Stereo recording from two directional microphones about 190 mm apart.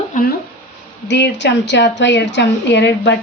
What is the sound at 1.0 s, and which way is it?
Speech, 65° left (ahead or behind).